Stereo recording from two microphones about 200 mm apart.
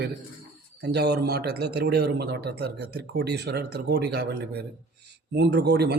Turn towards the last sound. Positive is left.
turn(degrees=-55)  # may be behind; listen again after turning